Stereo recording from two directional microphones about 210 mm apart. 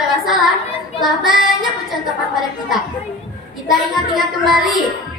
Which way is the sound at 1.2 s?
Centre (ahead or behind).